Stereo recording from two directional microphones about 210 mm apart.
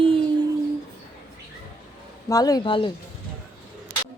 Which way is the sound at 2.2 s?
15° left (ahead or behind).